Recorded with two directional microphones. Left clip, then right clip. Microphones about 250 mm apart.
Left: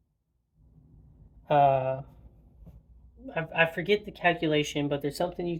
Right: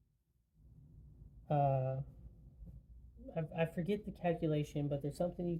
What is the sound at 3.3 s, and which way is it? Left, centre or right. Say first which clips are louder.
Speech: left 13 dB; centre.